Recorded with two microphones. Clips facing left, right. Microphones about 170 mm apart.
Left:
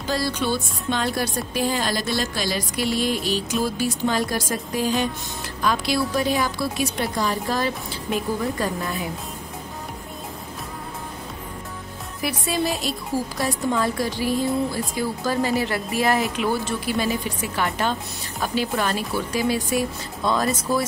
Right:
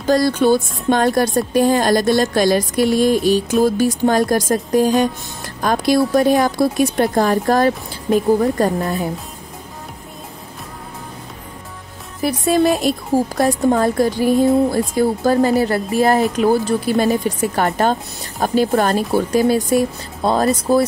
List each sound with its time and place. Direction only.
0.0 s speech: 45° right (ahead or behind)
12.2 s speech: 45° right (ahead or behind)